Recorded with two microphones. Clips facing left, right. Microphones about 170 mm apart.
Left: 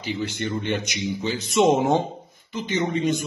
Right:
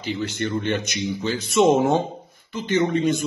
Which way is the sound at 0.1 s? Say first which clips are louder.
Right 2 dB; 15° left (ahead or behind).